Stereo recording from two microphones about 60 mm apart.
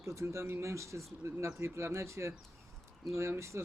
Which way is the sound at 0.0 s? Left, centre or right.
Right.